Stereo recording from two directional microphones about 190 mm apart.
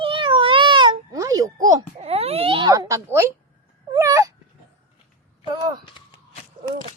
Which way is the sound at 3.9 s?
20° right (ahead or behind).